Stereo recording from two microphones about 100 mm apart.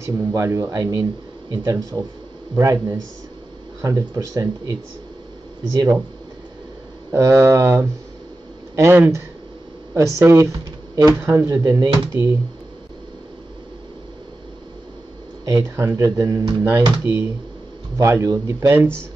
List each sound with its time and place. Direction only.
0.0 s speech: 30° right (ahead or behind)
7.1 s speech: 30° right (ahead or behind)
15.4 s speech: 30° right (ahead or behind)
16.6 s speech: 25° right (ahead or behind)
18.7 s speech: 20° right (ahead or behind)